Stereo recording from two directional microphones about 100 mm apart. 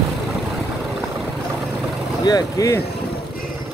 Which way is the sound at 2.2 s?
40° left (ahead or behind).